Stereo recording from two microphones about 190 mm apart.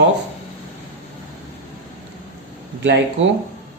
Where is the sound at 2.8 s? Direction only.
70° right (ahead or behind).